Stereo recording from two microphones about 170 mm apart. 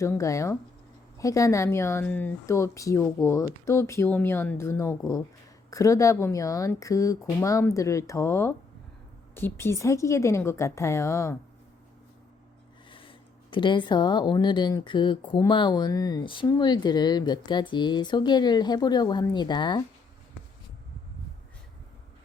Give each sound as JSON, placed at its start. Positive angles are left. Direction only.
{"t": 0.0, "sound": "speech", "side_deg": 20}
{"t": 12.9, "sound": "speech", "side_deg": 30}